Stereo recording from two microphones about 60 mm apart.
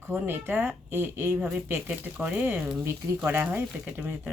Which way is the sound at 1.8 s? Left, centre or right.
Right.